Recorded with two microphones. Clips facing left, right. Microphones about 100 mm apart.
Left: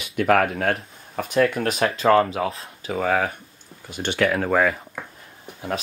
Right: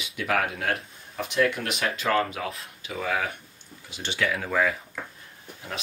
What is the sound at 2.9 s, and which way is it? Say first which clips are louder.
Speech: left 6 dB; 45° left (ahead or behind).